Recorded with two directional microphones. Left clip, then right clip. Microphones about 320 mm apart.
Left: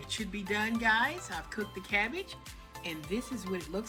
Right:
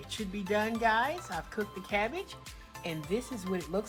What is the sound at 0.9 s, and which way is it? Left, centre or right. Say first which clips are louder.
Speech: left 1 dB; centre.